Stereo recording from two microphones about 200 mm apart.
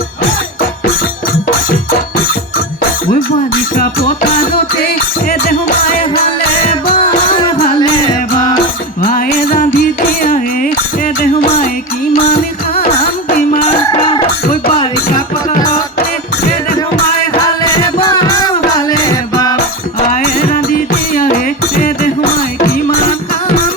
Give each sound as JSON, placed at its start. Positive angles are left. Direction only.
{"t": 5.3, "sound": "music", "side_deg": 50}
{"t": 7.0, "sound": "music", "side_deg": 25}
{"t": 9.0, "sound": "music", "side_deg": 45}
{"t": 13.9, "sound": "music", "side_deg": 25}
{"t": 18.0, "sound": "music", "side_deg": 20}
{"t": 20.1, "sound": "music", "side_deg": 45}